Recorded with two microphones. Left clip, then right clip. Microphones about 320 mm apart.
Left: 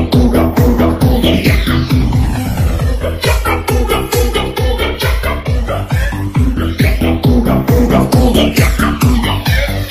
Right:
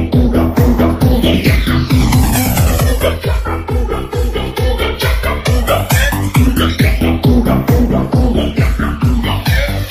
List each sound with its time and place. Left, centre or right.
0.1 s music: centre
6.8 s music: centre
7.9 s music: left